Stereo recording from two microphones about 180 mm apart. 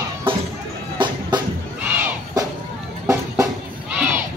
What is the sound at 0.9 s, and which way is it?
Music, 25° right (ahead or behind).